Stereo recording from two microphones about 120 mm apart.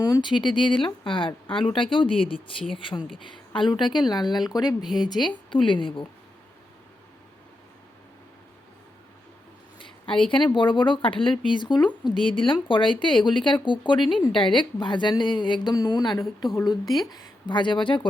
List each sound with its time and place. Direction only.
0.1 s a woman's voice: 40° left (ahead or behind)
9.7 s a sound: 45° left (ahead or behind)
10.2 s a woman's voice: 40° left (ahead or behind)
16.8 s speech: centre (ahead or behind)
17.1 s a woman's voice: 35° left (ahead or behind)